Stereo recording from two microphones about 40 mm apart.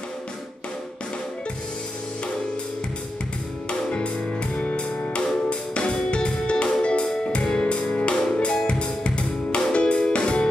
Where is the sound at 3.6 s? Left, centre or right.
Left.